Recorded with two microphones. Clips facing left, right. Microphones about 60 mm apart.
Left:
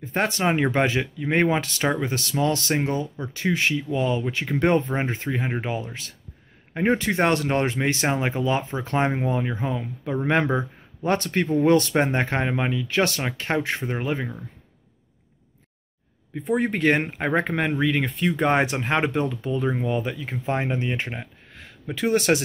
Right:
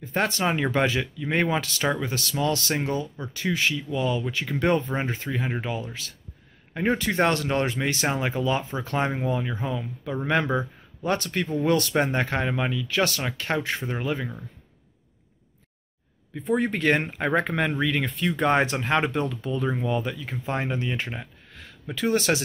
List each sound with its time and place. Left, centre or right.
0.0 s speech: left
16.3 s speech: left